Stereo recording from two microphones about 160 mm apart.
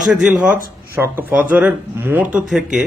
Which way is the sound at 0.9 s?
15° right (ahead or behind).